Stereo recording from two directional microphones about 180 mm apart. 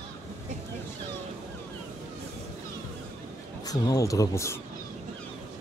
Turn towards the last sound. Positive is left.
turn(degrees=15)  # may be behind; listen again after turning